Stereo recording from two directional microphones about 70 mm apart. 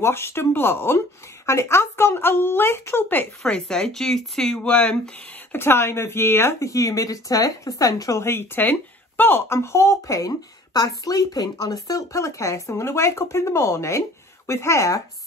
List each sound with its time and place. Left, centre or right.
0.0 s speech: left
3.4 s speech: centre
5.5 s speech: left
6.7 s speech: left
8.2 s speech: left